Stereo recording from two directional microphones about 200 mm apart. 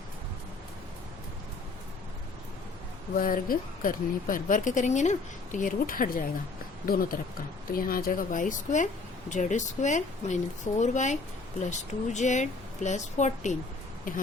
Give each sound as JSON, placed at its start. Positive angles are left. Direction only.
{"t": 3.2, "sound": "a woman's voice", "side_deg": 45}